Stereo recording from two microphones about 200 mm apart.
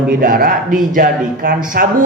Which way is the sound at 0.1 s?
45° right (ahead or behind).